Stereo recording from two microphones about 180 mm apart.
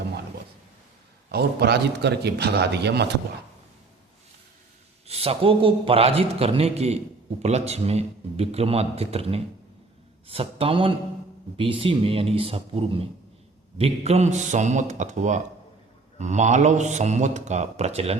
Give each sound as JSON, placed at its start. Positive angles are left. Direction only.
{"t": 1.3, "sound": "a man's voice", "side_deg": -65}
{"t": 5.0, "sound": "a man's voice", "side_deg": -35}